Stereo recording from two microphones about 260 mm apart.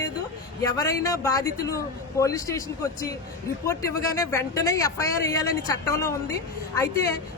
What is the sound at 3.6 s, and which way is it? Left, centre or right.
A man's voice, centre.